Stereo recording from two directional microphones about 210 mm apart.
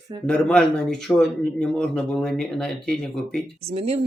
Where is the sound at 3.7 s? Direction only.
30° right (ahead or behind).